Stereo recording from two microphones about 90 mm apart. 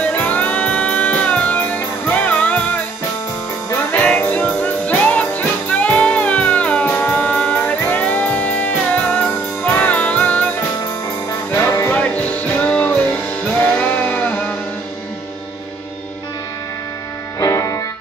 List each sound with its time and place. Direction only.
0.0 s music: 15° left (ahead or behind)
3.9 s music: 15° left (ahead or behind)
11.9 s music: 15° left (ahead or behind)
17.4 s music: 40° left (ahead or behind)